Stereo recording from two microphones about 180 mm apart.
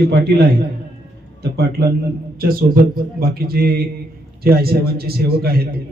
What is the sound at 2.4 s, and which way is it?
A man's voice, 55° right (ahead or behind).